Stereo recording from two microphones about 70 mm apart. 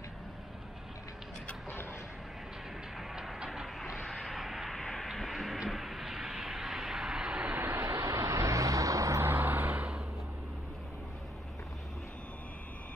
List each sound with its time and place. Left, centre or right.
3.0 s music: centre
3.4 s vehicle: centre
3.9 s a sound: centre
7.5 s vehicle: right
7.8 s vehicle: right
9.3 s vehicle: right